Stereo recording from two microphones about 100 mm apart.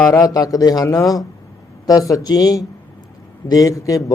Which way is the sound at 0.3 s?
40° left (ahead or behind).